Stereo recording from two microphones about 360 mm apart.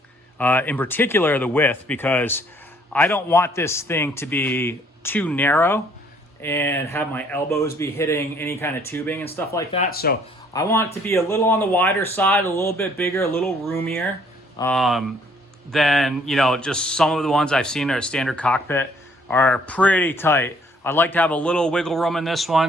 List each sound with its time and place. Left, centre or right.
0.3 s speech: centre
9.8 s speech: left
10.5 s speech: centre